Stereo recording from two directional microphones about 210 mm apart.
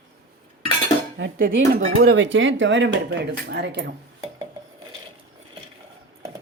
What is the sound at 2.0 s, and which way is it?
Speech, 60° right (ahead or behind).